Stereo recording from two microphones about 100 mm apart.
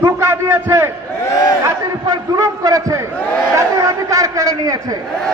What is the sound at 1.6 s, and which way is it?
A man's voice, 35° right (ahead or behind).